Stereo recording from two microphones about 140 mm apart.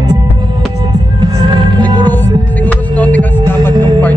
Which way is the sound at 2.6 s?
10° left (ahead or behind).